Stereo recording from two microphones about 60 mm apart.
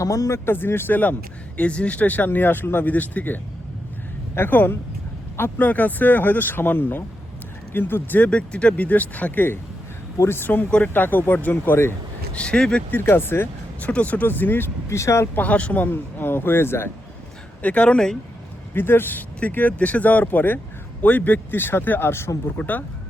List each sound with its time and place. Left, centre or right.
0.0 s speech: left
0.5 s speech: left
1.5 s speech: left
8.2 s speech: centre; by 11.9 s left
12.3 s speech: centre
12.9 s speech: left
13.8 s speech: left
14.8 s speech: left
15.4 s speech: left
15.9 s speech: left
17.6 s speech: left
18.7 s speech: left
22.4 s speech: left